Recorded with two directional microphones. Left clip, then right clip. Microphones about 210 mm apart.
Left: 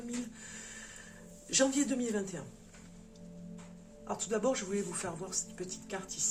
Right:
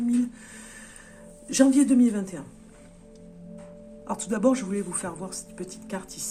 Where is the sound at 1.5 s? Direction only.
60° right (ahead or behind).